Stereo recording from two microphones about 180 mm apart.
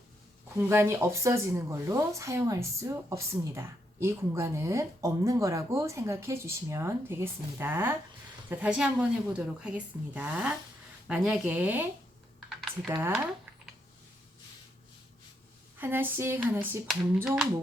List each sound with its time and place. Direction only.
0.5 s speech: 15° right (ahead or behind)
12.9 s speech: 15° right (ahead or behind)
15.8 s speech: 10° right (ahead or behind)